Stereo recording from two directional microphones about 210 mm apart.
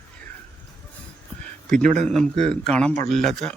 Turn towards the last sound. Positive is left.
turn(degrees=5)  # may be behind; listen again after turning